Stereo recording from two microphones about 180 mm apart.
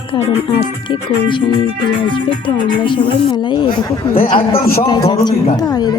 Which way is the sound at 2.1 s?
25° left (ahead or behind).